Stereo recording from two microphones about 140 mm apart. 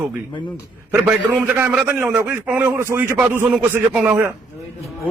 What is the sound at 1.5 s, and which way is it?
A man's voice, 10° right (ahead or behind).